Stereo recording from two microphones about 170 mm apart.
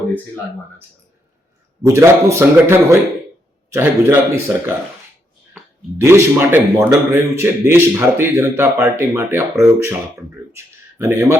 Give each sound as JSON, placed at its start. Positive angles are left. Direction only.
{"t": 1.8, "sound": "a man's voice", "side_deg": -15}
{"t": 6.0, "sound": "a man's voice", "side_deg": -15}
{"t": 10.5, "sound": "a sound", "side_deg": -15}